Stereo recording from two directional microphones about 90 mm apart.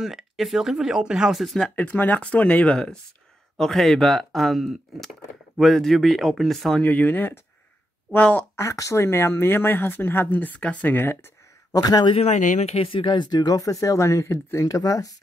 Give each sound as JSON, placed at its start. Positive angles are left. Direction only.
{"t": 0.0, "sound": "speech", "side_deg": 0}
{"t": 1.8, "sound": "speech", "side_deg": 20}
{"t": 6.8, "sound": "speech", "side_deg": 20}
{"t": 8.5, "sound": "speech", "side_deg": 35}
{"t": 11.7, "sound": "a man's voice", "side_deg": 45}
{"t": 12.7, "sound": "speech", "side_deg": 80}